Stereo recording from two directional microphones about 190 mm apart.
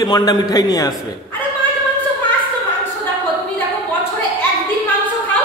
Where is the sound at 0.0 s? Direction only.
20° left (ahead or behind).